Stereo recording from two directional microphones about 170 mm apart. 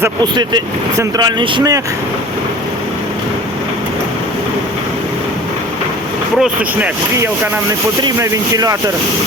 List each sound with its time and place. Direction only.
0.2 s speech: 25° right (ahead or behind)
6.4 s speech: 10° right (ahead or behind)
8.0 s speech: 20° right (ahead or behind)